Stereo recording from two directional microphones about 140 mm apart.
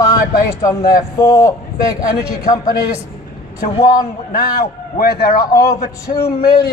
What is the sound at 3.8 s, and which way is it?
Speech, 25° left (ahead or behind).